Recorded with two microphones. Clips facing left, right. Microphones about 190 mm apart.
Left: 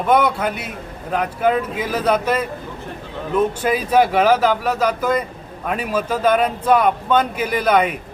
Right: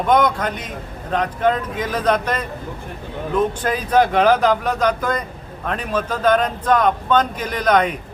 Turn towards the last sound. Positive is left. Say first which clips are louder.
# left 1 dB
turn(degrees=5)  # may be behind; listen again after turning